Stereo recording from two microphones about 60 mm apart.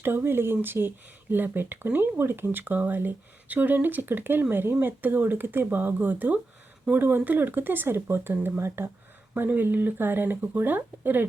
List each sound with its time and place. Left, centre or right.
0.0 s speech: right